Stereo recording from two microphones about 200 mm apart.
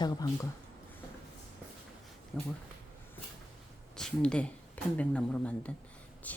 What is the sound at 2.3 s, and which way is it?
Speech, centre (ahead or behind).